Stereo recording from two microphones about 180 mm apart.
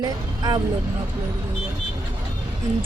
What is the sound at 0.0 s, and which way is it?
Speech, 20° right (ahead or behind).